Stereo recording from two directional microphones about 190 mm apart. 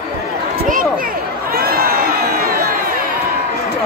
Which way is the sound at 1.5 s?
50° right (ahead or behind).